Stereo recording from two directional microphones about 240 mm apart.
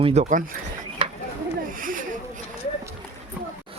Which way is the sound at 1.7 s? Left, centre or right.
Right.